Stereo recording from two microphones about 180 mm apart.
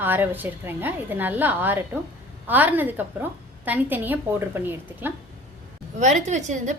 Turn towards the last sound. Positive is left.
turn(degrees=-40)  # may be behind; listen again after turning